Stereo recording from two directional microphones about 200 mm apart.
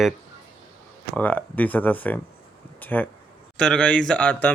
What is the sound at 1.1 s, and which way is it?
Speech, 10° left (ahead or behind).